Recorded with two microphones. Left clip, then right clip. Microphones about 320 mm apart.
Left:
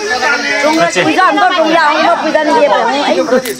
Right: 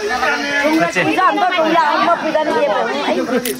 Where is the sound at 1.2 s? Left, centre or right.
Left.